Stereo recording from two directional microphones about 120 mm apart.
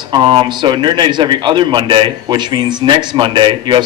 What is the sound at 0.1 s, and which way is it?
A man's voice, 45° right (ahead or behind).